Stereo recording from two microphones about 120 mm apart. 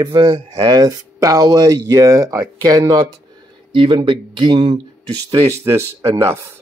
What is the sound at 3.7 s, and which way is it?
Speech, 45° right (ahead or behind).